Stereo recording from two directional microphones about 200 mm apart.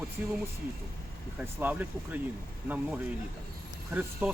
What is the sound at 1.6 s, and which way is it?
Speech, 10° right (ahead or behind).